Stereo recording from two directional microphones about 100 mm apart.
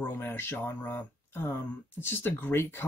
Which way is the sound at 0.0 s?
20° left (ahead or behind).